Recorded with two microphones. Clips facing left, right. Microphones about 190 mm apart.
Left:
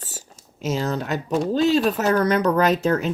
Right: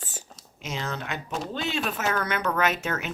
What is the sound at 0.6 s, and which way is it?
Speech, 40° left (ahead or behind).